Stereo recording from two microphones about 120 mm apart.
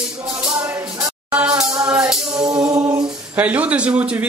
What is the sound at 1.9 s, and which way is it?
Music, 5° right (ahead or behind).